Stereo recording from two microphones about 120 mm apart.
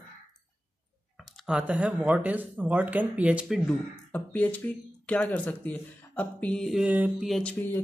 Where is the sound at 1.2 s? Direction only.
5° right (ahead or behind).